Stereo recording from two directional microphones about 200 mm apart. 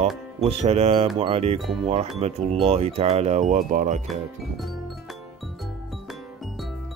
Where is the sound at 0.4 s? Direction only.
30° right (ahead or behind).